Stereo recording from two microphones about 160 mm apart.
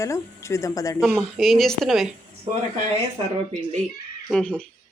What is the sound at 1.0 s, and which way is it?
Speech, centre (ahead or behind).